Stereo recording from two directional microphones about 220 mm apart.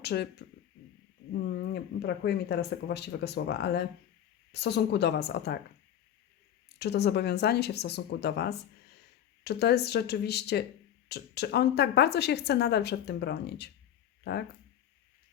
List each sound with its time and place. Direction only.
0.0 s speech: 50° left (ahead or behind)
6.7 s speech: 50° left (ahead or behind)